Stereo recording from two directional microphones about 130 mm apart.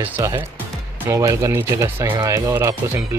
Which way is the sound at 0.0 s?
15° right (ahead or behind).